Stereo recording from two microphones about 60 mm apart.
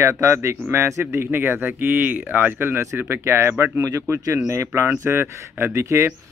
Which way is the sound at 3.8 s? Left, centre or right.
Right.